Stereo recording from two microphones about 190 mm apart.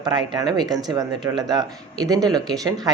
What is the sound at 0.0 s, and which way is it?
Speech, 20° right (ahead or behind).